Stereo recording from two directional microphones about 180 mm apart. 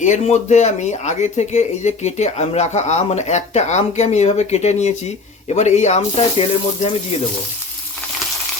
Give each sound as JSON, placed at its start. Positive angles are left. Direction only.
{"t": 0.0, "sound": "speech", "side_deg": 40}